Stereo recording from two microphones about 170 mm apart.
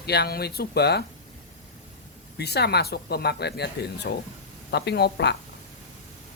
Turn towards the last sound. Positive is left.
turn(degrees=80)